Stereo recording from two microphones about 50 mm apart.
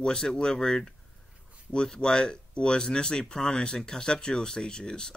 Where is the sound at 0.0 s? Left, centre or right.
Centre.